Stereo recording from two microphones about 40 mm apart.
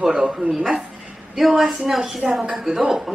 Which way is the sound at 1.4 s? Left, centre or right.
Centre.